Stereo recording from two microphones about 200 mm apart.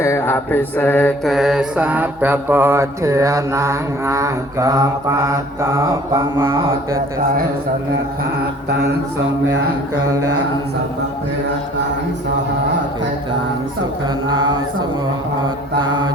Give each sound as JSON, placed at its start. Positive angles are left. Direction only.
{"t": 0.0, "sound": "mantra", "side_deg": 10}
{"t": 10.1, "sound": "mantra", "side_deg": -15}
{"t": 14.3, "sound": "mantra", "side_deg": -25}